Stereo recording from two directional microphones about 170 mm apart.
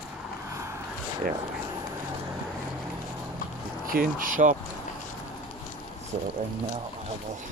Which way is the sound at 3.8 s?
55° right (ahead or behind).